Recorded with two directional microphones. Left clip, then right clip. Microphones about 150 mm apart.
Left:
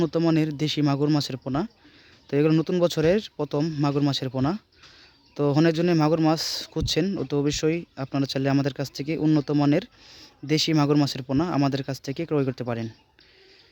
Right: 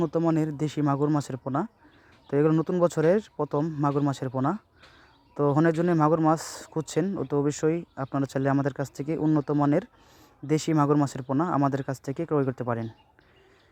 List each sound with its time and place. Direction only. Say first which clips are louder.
0.0 s speech: left 2 dB; 10° left (ahead or behind)
5.8 s speech: left 1 dB; 5° left (ahead or behind)
7.7 s speech: left 1 dB; 15° left (ahead or behind); by 9.0 s centre (ahead or behind)
9.0 s speech: left 2 dB; 10° left (ahead or behind)
12.2 s speech: left 1 dB; 10° left (ahead or behind)